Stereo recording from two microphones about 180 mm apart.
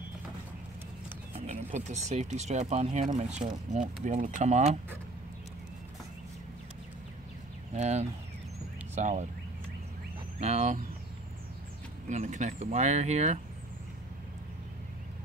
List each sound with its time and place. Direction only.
1.3 s speech: 40° right (ahead or behind)
7.7 s speech: 40° right (ahead or behind)
10.4 s speech: 40° right (ahead or behind)
12.1 s speech: 40° right (ahead or behind)